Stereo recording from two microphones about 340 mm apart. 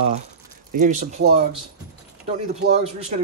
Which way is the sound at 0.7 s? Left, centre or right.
Right.